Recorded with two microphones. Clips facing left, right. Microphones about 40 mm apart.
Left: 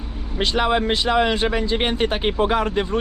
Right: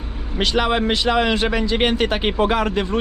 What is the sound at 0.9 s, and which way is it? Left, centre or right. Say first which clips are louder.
Speech: right 1 dB; right.